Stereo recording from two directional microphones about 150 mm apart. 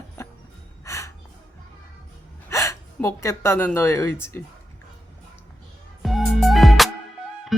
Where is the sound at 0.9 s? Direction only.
20° left (ahead or behind).